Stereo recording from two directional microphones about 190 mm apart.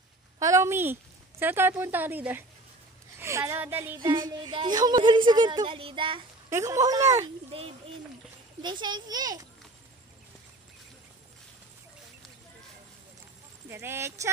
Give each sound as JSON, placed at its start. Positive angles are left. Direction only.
{"t": 0.4, "sound": "speech", "side_deg": -15}
{"t": 4.0, "sound": "a woman's voice", "side_deg": -25}
{"t": 6.5, "sound": "speech", "side_deg": -15}
{"t": 7.5, "sound": "a woman's voice", "side_deg": -30}
{"t": 13.7, "sound": "speech", "side_deg": -15}